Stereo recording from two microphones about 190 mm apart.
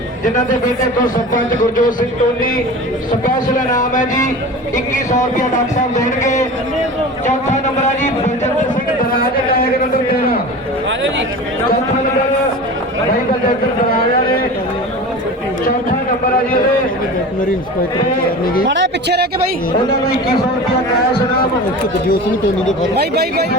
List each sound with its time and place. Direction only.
1.3 s speech: 45° left (ahead or behind)
6.2 s speech: 40° left (ahead or behind)
9.1 s speech: 50° left (ahead or behind)
18.7 s speech: 65° right (ahead or behind)
23.0 s speech: 55° right (ahead or behind)